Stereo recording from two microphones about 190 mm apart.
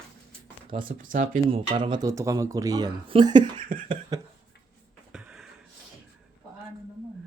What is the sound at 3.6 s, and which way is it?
Speech, 45° right (ahead or behind).